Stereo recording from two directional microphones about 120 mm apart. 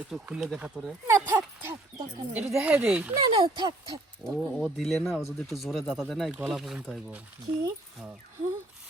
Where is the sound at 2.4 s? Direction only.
5° right (ahead or behind).